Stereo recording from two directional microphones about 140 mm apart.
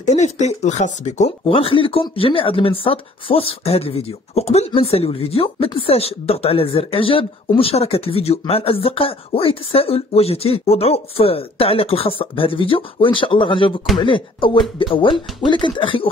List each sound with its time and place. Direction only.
0.0 s speech: 55° left (ahead or behind)
1.5 s speech: 40° left (ahead or behind)